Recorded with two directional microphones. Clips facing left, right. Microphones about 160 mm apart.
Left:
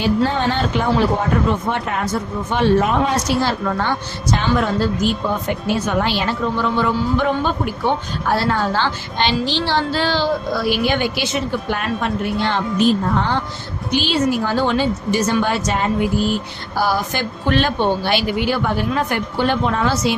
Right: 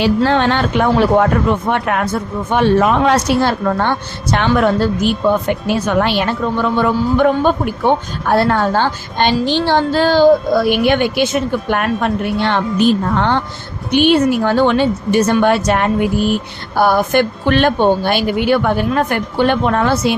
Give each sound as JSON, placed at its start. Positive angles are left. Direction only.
{"t": 0.0, "sound": "a woman's voice", "side_deg": -80}
{"t": 2.8, "sound": "a woman's voice", "side_deg": -70}